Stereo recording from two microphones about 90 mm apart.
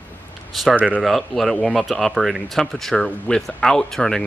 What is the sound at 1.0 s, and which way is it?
Speech, centre (ahead or behind).